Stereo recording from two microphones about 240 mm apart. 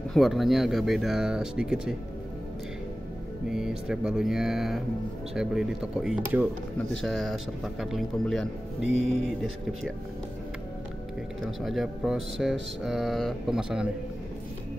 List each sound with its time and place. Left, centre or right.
0.1 s speech: centre
3.4 s speech: centre
11.6 s speech: centre